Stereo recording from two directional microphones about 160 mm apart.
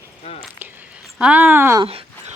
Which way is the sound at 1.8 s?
35° right (ahead or behind).